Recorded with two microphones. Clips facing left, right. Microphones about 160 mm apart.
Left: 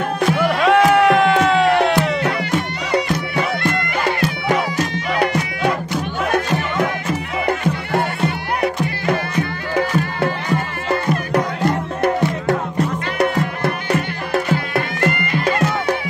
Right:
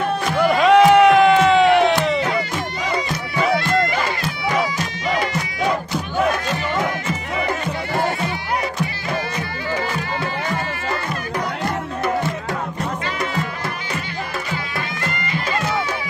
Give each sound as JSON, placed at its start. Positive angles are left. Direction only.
{"t": 0.4, "sound": "music", "side_deg": 0}
{"t": 2.1, "sound": "music", "side_deg": 65}
{"t": 13.9, "sound": "music", "side_deg": 60}